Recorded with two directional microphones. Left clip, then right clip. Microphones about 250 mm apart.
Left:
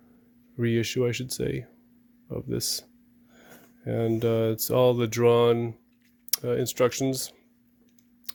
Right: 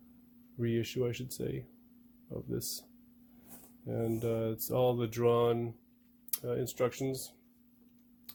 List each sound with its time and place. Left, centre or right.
0.6 s speech: left
3.8 s speech: left